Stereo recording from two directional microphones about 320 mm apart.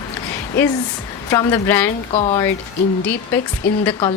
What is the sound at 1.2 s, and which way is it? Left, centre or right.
A woman's voice, centre.